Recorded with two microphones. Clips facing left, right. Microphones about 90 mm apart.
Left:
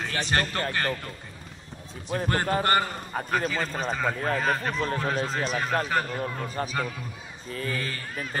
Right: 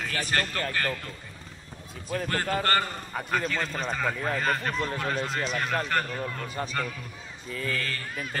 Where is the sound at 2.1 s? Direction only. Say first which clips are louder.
Left 3 dB; 30° left (ahead or behind).